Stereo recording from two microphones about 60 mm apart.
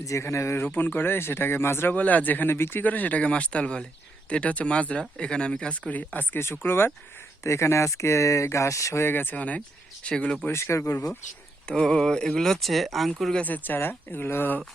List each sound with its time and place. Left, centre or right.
0.0 s speech: left
0.6 s speech: left
2.8 s speech: left
5.9 s speech: left
7.4 s speech: left
9.0 s speech: left
9.3 s speech: left
10.5 s speech: left
11.7 s speech: centre
13.4 s speech: left